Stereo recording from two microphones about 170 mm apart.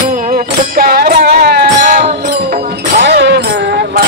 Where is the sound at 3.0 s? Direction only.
80° right.